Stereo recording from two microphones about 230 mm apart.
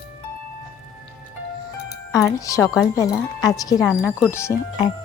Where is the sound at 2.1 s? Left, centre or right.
Centre.